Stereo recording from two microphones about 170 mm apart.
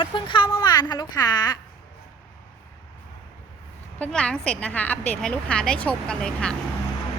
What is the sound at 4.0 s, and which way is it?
A woman's voice, 5° left (ahead or behind).